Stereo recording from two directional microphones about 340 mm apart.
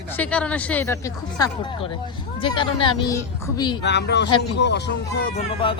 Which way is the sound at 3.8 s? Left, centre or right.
Left.